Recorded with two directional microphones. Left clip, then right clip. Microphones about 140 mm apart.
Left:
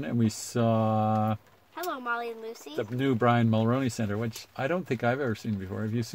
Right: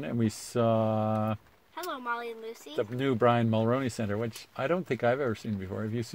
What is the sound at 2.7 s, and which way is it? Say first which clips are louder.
Speech: even; 35° right (ahead or behind).